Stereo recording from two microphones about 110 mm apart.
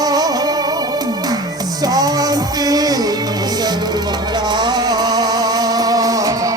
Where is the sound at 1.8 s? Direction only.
35° right (ahead or behind).